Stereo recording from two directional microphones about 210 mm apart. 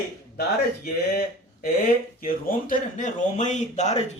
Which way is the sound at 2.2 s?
40° left (ahead or behind).